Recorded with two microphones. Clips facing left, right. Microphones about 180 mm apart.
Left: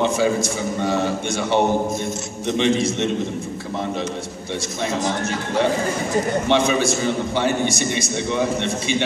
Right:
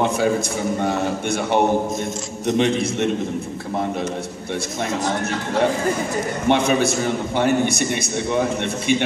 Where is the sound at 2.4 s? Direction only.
50° right (ahead or behind).